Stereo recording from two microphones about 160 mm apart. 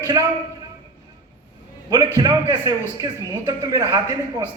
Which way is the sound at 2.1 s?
25° right (ahead or behind).